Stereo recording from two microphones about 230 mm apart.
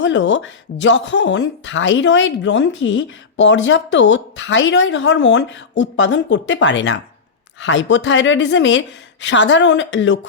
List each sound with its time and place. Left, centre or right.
0.0 s speech: left